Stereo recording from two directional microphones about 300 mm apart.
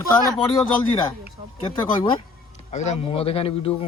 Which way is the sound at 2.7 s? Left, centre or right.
Left.